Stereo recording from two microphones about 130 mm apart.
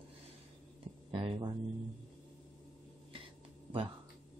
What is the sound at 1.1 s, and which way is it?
Speech, 45° right (ahead or behind).